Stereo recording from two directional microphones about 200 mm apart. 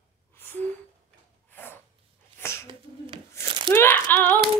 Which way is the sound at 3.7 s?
10° left (ahead or behind).